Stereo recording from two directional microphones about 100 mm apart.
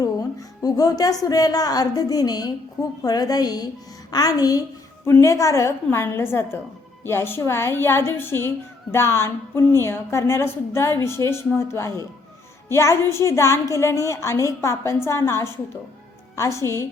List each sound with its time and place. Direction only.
0.0 s a woman's voice: 35° left (ahead or behind)